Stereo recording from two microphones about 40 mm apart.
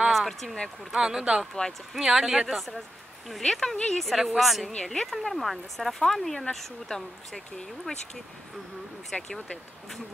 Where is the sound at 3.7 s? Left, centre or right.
Left.